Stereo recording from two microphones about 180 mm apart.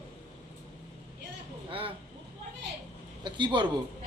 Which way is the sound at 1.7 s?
30° right (ahead or behind).